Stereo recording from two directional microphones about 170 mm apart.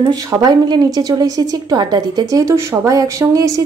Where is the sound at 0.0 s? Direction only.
20° right (ahead or behind).